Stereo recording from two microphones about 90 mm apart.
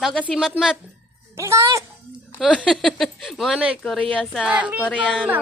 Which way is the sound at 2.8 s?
Centre (ahead or behind).